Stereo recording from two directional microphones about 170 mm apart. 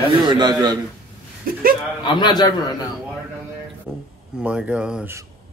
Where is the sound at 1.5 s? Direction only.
55° right (ahead or behind).